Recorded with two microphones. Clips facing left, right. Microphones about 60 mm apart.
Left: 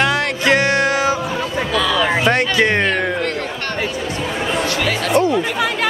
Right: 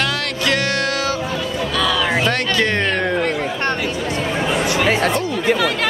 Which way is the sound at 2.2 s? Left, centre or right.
Centre.